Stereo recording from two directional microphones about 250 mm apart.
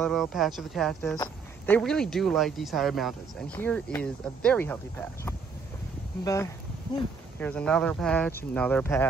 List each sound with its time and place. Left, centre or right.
0.0 s speech: centre
1.1 s speech: centre
1.8 s speech: centre